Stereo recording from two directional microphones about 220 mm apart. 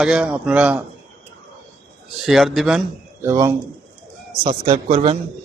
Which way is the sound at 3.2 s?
15° right (ahead or behind).